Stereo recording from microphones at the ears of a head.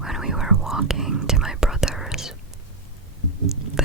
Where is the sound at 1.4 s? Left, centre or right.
Centre.